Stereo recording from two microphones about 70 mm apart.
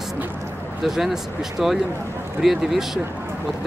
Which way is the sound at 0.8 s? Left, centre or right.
Centre.